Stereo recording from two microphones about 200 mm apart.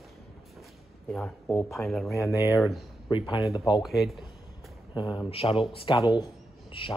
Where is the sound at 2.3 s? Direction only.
15° right (ahead or behind).